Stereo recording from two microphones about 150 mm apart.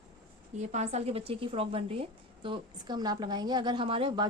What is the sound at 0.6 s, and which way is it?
A woman's voice, 50° right (ahead or behind).